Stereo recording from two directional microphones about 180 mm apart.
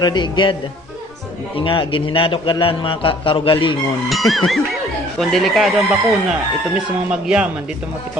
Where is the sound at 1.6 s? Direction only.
30° left (ahead or behind).